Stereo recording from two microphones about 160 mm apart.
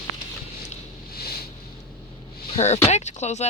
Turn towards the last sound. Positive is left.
turn(degrees=45)  # may be behind; listen again after turning